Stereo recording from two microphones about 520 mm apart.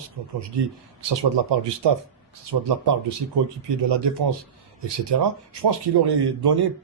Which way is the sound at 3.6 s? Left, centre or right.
Right.